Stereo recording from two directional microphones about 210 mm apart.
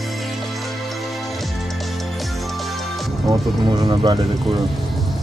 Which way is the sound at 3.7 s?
20° right (ahead or behind).